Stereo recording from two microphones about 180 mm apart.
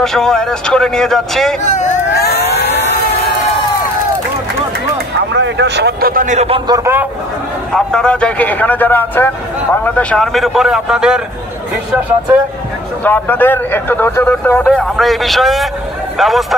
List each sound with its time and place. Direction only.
0.0 s a man's voice: 5° left (ahead or behind)
1.6 s speech: 40° left (ahead or behind)
2.1 s vehicle: 60° left (ahead or behind)
5.3 s speech: 75° right (ahead or behind); by 6.6 s 40° right (ahead or behind)
6.7 s speech: 15° right (ahead or behind)
7.7 s a man's voice: 5° left (ahead or behind)
13.0 s a man's voice: 10° left (ahead or behind)